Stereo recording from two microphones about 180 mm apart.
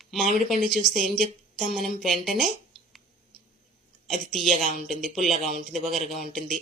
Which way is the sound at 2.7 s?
Centre (ahead or behind).